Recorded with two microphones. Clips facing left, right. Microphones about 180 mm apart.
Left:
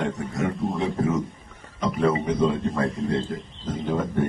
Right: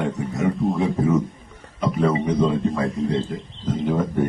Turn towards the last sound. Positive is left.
turn(degrees=-5)  # may be behind; listen again after turning